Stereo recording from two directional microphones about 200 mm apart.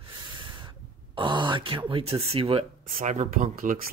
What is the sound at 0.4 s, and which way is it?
Speech, 25° right (ahead or behind).